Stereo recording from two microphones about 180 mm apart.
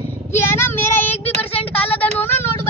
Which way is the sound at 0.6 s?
10° left (ahead or behind).